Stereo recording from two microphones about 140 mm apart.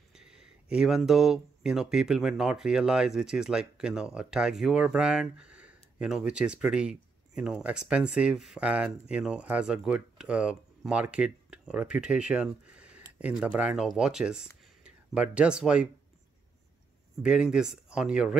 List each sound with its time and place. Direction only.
0.1 s speech: 5° right (ahead or behind)
17.2 s speech: 5° right (ahead or behind)